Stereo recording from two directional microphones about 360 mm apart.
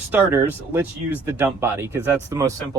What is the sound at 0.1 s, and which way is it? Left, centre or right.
Speech, centre.